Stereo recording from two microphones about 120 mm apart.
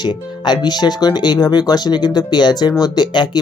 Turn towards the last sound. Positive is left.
turn(degrees=35)  # may be behind; listen again after turning